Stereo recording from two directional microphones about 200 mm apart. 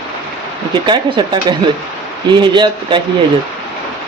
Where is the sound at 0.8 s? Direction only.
25° right (ahead or behind).